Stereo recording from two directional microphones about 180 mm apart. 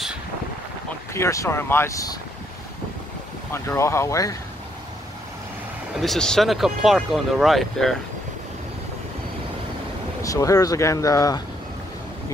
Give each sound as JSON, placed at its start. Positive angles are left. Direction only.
{"t": 1.1, "sound": "speech", "side_deg": 15}
{"t": 3.5, "sound": "speech", "side_deg": 15}
{"t": 5.9, "sound": "speech", "side_deg": 0}
{"t": 10.2, "sound": "speech", "side_deg": 20}